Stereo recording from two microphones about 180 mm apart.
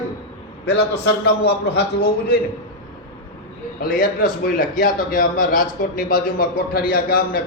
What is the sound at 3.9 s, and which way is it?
A man's voice, 50° left (ahead or behind).